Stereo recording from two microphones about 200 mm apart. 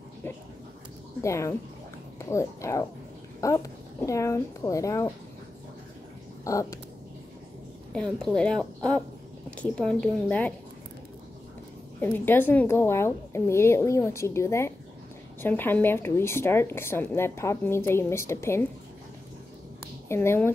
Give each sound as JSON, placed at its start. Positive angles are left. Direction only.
{"t": 1.2, "sound": "a woman's voice", "side_deg": 15}
{"t": 6.4, "sound": "a sound", "side_deg": 15}
{"t": 7.9, "sound": "a woman's voice", "side_deg": 5}
{"t": 12.0, "sound": "a woman's voice", "side_deg": 10}
{"t": 20.1, "sound": "a woman's voice", "side_deg": 10}